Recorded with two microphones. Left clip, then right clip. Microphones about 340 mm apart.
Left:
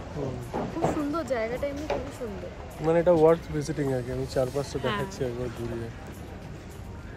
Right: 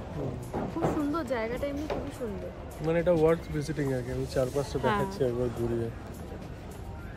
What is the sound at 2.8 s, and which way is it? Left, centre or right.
Speech, centre.